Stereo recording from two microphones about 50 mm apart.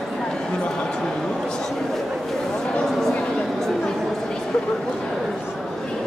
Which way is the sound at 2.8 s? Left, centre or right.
Centre.